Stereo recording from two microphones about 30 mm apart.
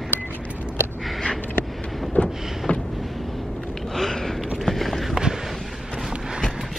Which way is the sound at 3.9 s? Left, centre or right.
Centre.